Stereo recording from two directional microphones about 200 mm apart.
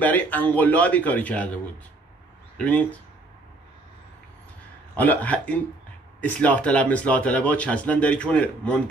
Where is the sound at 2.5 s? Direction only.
5° left (ahead or behind).